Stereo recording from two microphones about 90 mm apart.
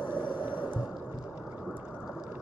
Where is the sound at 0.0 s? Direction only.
20° right (ahead or behind).